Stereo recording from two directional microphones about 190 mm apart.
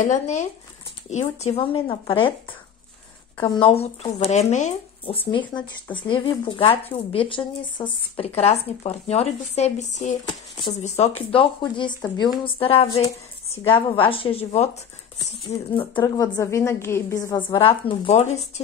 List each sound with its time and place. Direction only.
0.0 s speech: 40° left (ahead or behind)
3.3 s speech: 25° left (ahead or behind)